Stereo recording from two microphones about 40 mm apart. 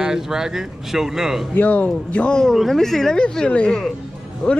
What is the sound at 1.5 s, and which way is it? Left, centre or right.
Speech, left.